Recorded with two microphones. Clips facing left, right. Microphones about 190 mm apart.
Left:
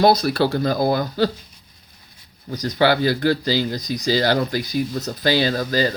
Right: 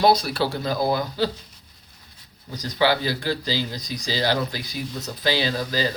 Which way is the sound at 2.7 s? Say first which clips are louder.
Left 4 dB; 50° left (ahead or behind).